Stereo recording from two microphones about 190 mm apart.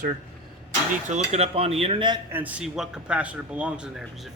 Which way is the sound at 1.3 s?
30° right (ahead or behind).